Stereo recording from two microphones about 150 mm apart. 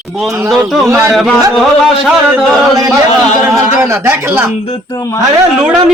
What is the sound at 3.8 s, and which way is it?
Speech, 15° right (ahead or behind).